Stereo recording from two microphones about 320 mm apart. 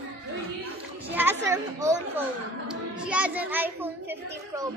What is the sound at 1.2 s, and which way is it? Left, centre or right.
Speech, centre.